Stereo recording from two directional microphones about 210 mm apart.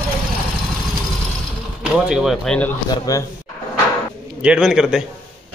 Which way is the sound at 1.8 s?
5° right (ahead or behind).